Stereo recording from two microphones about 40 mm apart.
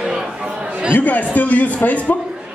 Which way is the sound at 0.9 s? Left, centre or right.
Left.